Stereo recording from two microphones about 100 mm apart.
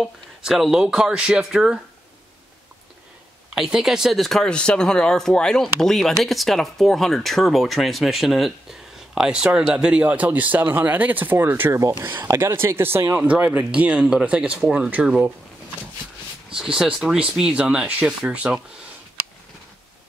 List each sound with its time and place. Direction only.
0.0 s speech: 5° right (ahead or behind)
3.5 s speech: 5° right (ahead or behind)
16.5 s speech: 5° right (ahead or behind)